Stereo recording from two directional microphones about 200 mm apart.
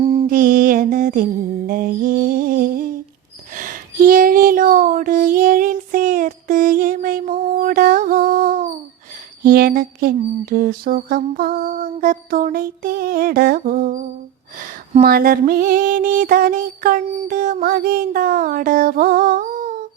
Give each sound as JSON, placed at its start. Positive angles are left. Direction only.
{"t": 0.0, "sound": "mantra", "side_deg": -30}
{"t": 0.3, "sound": "mantra", "side_deg": -45}
{"t": 1.6, "sound": "a sound", "side_deg": -45}